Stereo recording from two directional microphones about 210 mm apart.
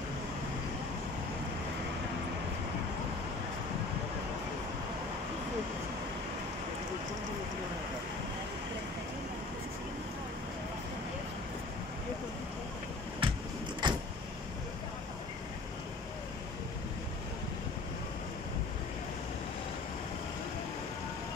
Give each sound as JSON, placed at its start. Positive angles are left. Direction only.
{"t": 13.2, "sound": "vehicle", "side_deg": -25}